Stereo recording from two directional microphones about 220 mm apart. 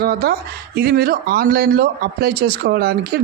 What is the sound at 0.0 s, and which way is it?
Speech, 45° right (ahead or behind).